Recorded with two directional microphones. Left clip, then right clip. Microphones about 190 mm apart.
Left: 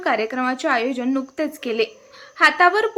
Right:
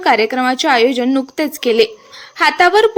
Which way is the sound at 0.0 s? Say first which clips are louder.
Right 8 dB; 20° right (ahead or behind).